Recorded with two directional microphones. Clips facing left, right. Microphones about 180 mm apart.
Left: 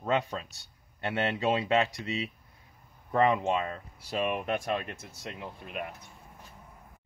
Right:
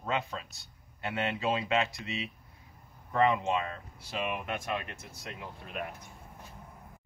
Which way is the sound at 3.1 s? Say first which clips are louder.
Left 2 dB; 35° left (ahead or behind).